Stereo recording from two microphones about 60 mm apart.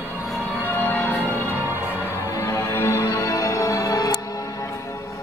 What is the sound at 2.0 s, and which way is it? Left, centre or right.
Music, left.